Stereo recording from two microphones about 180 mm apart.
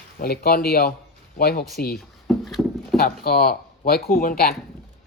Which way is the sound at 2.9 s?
55° left (ahead or behind).